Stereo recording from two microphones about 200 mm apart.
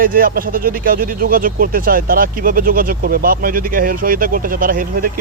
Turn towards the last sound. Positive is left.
turn(degrees=-45)  # may be behind; listen again after turning